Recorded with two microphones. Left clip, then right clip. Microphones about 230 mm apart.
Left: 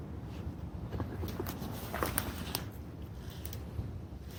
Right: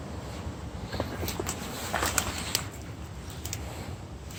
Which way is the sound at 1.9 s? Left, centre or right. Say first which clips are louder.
Right 7 dB; centre.